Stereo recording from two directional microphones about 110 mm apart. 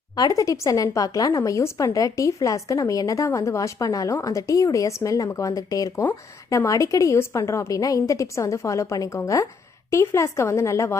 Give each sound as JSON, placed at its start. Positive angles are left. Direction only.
{"t": 0.2, "sound": "speech", "side_deg": 30}
{"t": 6.7, "sound": "a woman's voice", "side_deg": 30}